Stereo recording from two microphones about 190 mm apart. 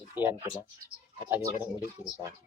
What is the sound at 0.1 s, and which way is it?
Speech, 10° right (ahead or behind).